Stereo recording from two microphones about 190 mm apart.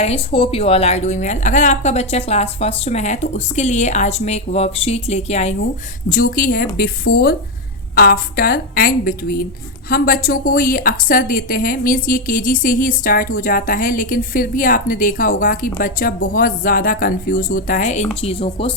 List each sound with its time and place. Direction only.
0.0 s a woman's voice: 30° left (ahead or behind)
18.2 s a woman's voice: 30° left (ahead or behind)